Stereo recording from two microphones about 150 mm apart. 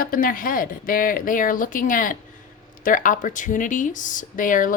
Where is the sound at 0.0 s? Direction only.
70° left (ahead or behind).